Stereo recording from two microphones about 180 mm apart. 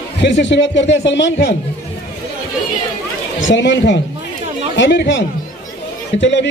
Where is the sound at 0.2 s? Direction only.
85° left.